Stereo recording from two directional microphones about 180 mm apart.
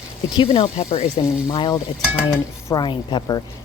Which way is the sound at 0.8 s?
35° left (ahead or behind).